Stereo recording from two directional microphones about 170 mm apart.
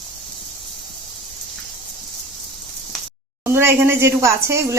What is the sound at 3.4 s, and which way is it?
A woman's voice, 15° right (ahead or behind).